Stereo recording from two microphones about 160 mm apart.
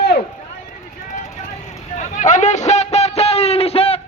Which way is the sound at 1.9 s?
50° left (ahead or behind).